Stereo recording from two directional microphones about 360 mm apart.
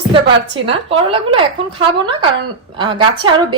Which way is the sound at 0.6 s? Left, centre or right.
Centre.